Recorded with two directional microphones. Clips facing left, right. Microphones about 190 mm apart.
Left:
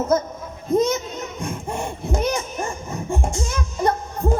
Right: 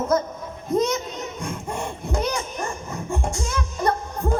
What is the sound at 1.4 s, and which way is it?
Speech, 20° left (ahead or behind).